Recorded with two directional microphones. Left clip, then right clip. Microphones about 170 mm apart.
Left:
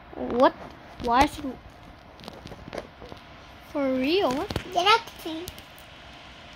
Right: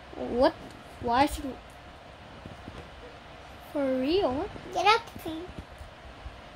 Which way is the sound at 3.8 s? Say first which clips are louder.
Left 2 dB; 5° left (ahead or behind).